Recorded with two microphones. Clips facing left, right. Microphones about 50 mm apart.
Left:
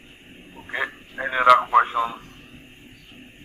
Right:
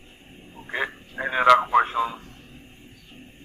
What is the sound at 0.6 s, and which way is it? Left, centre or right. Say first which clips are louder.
Radio: left 1 dB; centre.